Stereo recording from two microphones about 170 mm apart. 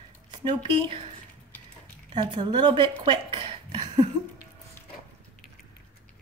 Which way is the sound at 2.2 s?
25° right (ahead or behind).